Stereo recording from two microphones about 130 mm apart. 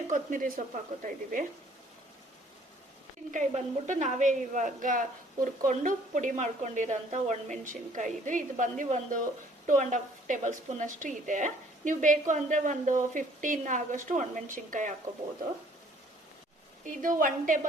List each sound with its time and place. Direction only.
0.1 s a woman's voice: 85° right
3.3 s a woman's voice: 70° right (ahead or behind); by 14.9 s 90° right
16.8 s a woman's voice: 90° right